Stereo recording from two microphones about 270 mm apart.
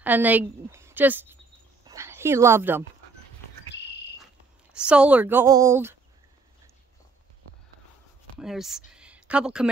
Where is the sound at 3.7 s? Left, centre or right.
Left.